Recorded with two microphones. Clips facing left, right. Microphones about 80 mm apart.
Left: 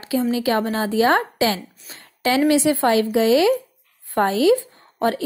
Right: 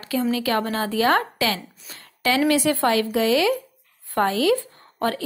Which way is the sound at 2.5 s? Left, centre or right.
Left.